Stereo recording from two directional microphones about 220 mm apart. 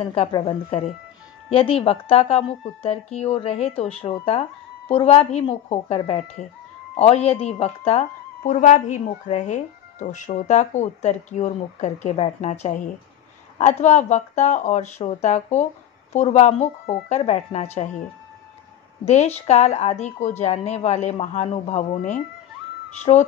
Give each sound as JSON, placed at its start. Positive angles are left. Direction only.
{"t": 0.0, "sound": "a woman's voice", "side_deg": 25}
{"t": 19.0, "sound": "a woman's voice", "side_deg": 30}